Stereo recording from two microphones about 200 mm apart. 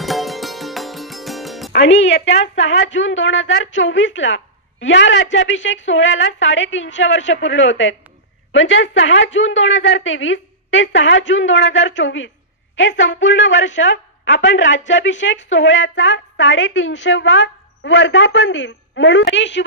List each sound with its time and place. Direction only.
0.0 s music: centre (ahead or behind)
1.7 s a woman's voice: 65° left (ahead or behind)